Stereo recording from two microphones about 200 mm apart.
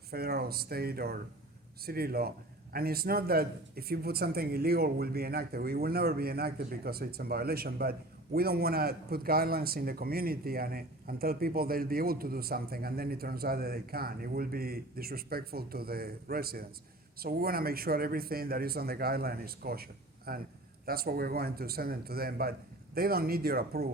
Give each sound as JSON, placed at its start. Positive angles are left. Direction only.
{"t": 0.1, "sound": "a man's voice", "side_deg": -50}